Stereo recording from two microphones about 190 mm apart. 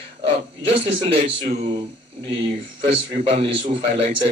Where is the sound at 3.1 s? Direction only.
30° right (ahead or behind).